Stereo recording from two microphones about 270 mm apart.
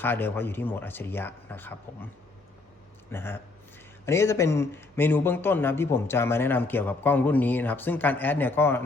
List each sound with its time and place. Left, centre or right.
0.0 s a man's voice: centre
3.1 s a man's voice: centre